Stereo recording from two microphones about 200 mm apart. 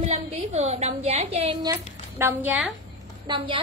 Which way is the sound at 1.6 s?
15° right (ahead or behind).